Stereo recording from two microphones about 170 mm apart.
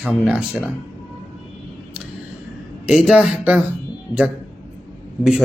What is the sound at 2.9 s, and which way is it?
Speech, 5° right (ahead or behind).